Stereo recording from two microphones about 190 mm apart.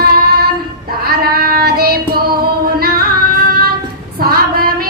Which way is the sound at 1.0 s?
55° right (ahead or behind).